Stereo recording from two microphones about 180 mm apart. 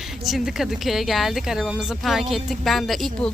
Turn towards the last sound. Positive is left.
turn(degrees=0)  # may be behind; listen again after turning